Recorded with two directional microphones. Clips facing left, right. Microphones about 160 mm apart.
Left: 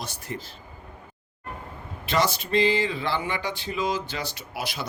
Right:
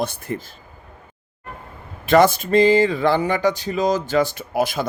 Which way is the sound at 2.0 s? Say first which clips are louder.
Right 10 dB; 50° right (ahead or behind).